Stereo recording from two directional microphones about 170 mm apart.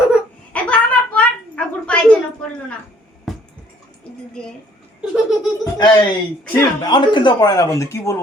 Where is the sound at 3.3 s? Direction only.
Centre (ahead or behind).